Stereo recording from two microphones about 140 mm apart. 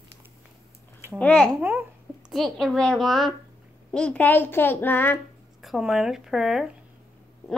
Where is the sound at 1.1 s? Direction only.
10° left (ahead or behind).